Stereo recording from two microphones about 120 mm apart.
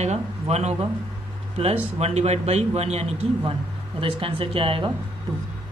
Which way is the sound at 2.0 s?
60° right (ahead or behind).